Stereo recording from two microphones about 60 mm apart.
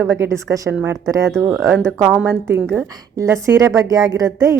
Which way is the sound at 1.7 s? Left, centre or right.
Centre.